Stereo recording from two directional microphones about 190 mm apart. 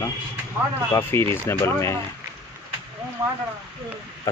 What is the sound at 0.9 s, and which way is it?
Speech, 15° left (ahead or behind).